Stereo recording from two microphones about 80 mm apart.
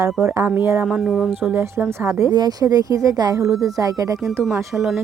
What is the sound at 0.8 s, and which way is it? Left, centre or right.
Speech, centre.